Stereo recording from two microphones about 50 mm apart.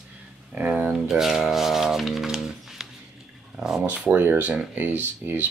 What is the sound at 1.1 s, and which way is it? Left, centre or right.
Speech, centre.